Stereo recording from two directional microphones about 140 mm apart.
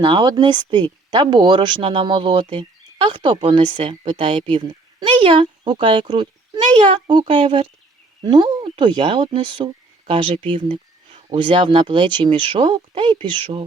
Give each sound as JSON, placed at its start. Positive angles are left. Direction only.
{"t": 0.0, "sound": "speech", "side_deg": -35}